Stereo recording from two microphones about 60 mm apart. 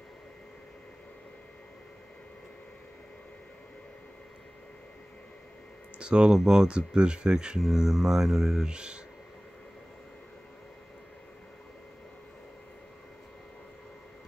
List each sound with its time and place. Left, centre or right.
5.9 s speech: centre
7.6 s speech: centre
8.6 s speech: centre